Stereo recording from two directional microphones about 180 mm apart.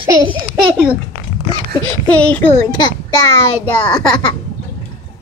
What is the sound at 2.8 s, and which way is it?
Speech, 20° left (ahead or behind).